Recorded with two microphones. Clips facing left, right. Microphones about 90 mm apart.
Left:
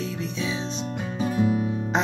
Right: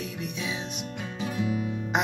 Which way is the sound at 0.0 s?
25° left (ahead or behind).